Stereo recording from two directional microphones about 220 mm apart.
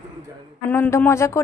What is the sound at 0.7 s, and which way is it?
Speech, 10° left (ahead or behind).